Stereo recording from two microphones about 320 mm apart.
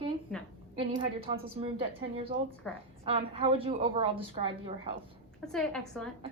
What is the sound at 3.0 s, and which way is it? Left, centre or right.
A woman's voice, centre.